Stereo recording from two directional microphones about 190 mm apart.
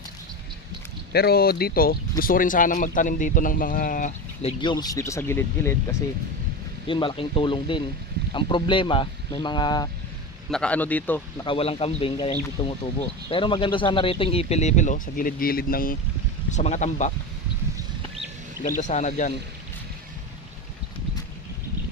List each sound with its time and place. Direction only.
1.1 s speech: 55° left (ahead or behind)
4.4 s speech: 25° left (ahead or behind)
6.8 s speech: 25° left (ahead or behind)
10.5 s speech: 5° left (ahead or behind)
11.4 s speech: 30° left (ahead or behind); by 16.0 s 50° left (ahead or behind)
16.5 s speech: 40° left (ahead or behind)
18.8 s speech: 40° left (ahead or behind)